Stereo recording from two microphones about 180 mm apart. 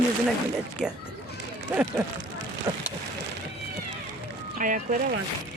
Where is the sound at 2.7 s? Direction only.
20° right (ahead or behind).